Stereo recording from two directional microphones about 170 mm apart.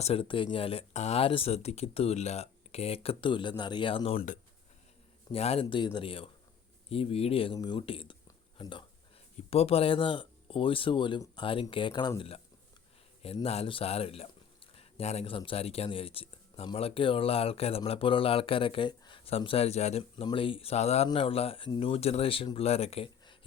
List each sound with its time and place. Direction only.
0.0 s a man's voice: 35° left (ahead or behind)
5.3 s a man's voice: 35° left (ahead or behind)